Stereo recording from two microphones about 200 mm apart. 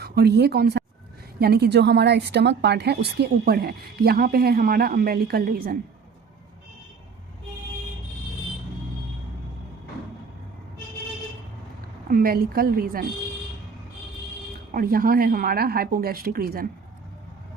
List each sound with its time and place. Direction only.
0.0 s a woman's voice: 55° right (ahead or behind)
12.1 s a woman's voice: 50° right (ahead or behind)
14.7 s a woman's voice: 45° right (ahead or behind)